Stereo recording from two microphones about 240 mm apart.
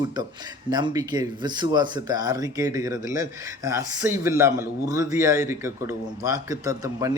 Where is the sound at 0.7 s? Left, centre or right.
Centre.